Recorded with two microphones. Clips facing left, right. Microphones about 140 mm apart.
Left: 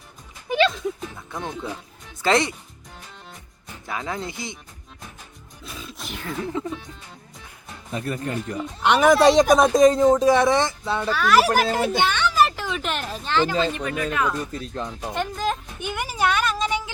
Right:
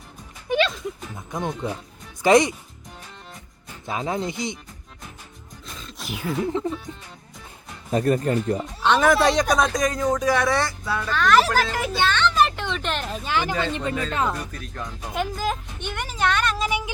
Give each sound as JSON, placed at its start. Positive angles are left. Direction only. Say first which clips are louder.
{"t": 1.3, "sound": "speech", "louder": "right 4 dB", "side_deg": -20}
{"t": 3.8, "sound": "speech", "louder": "right 3 dB", "side_deg": -20}
{"t": 5.7, "sound": "speech", "louder": "right 1 dB", "side_deg": 5}
{"t": 7.9, "sound": "speech", "louder": "right 7 dB", "side_deg": -40}
{"t": 8.8, "sound": "speech", "louder": "left 3 dB", "side_deg": 15}
{"t": 11.1, "sound": "speech", "louder": "even", "side_deg": 5}
{"t": 11.9, "sound": "children playing", "louder": "right 3 dB", "side_deg": 15}
{"t": 13.3, "sound": "speech", "louder": "left 3 dB", "side_deg": -15}
{"t": 14.1, "sound": "speech", "louder": "left 1 dB", "side_deg": -30}
{"t": 14.5, "sound": "speech", "louder": "left 4 dB", "side_deg": 25}
{"t": 15.1, "sound": "speech", "louder": "even", "side_deg": 0}
{"t": 15.8, "sound": "a woman's voice", "louder": "left 2 dB", "side_deg": 10}